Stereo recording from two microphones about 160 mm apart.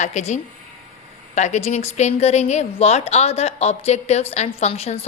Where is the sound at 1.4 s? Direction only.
45° left (ahead or behind).